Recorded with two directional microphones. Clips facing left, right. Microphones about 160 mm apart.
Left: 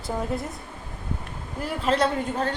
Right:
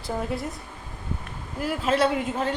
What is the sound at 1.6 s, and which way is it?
Speech, 5° right (ahead or behind).